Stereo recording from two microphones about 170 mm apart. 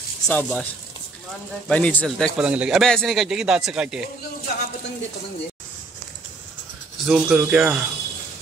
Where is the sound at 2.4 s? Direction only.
5° right (ahead or behind).